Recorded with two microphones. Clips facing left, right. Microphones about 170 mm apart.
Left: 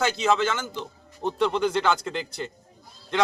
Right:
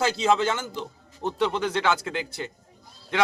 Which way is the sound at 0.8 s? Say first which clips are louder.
Even; centre (ahead or behind).